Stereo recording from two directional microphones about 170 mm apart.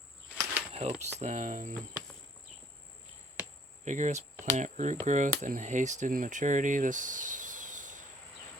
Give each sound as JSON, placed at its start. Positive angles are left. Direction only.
{"t": 0.7, "sound": "speech", "side_deg": -40}
{"t": 3.8, "sound": "speech", "side_deg": -45}